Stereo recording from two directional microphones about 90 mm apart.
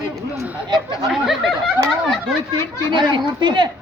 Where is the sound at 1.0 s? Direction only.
Centre (ahead or behind).